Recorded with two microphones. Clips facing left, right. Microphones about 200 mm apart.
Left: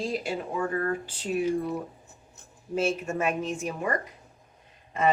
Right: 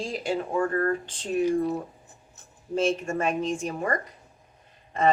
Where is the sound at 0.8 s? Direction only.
5° left (ahead or behind).